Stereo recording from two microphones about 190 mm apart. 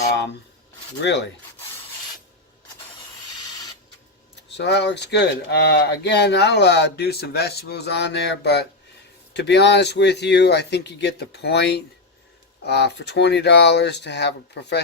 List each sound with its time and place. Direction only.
1.0 s speech: 65° left (ahead or behind)
4.4 s speech: 65° left (ahead or behind)